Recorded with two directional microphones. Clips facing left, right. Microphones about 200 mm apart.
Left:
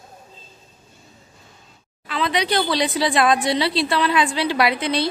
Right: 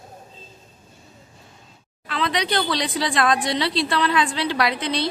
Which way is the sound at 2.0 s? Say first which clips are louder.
Left 2 dB; 5° left (ahead or behind).